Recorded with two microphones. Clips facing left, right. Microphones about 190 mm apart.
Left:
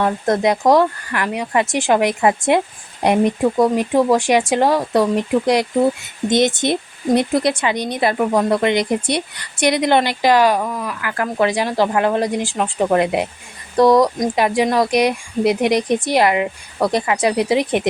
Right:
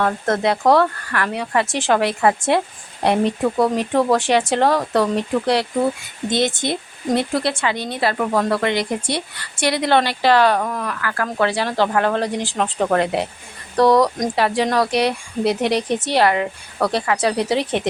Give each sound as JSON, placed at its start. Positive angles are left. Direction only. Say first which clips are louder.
{"t": 0.0, "sound": "speech", "louder": "left 2 dB", "side_deg": 15}